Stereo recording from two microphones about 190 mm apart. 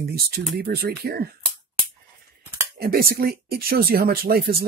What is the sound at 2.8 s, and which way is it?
Speech, 50° right (ahead or behind).